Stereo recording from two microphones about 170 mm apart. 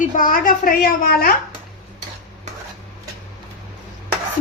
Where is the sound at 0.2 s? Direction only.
55° left (ahead or behind).